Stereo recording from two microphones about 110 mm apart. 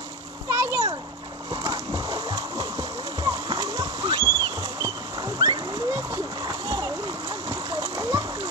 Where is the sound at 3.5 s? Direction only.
40° right (ahead or behind).